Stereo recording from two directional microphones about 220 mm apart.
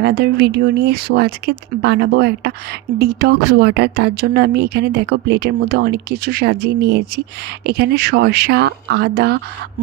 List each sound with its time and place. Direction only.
0.2 s speech: 50° right (ahead or behind)